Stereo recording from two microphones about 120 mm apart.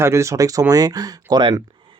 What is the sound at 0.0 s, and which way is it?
Speech, 25° right (ahead or behind).